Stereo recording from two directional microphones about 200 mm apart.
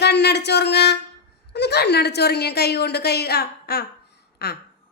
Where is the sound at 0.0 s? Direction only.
55° left (ahead or behind).